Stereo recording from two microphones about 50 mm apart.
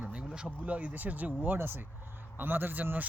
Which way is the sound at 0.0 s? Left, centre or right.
Right.